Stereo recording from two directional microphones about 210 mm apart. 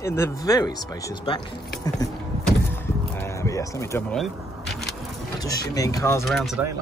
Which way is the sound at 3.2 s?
15° left (ahead or behind).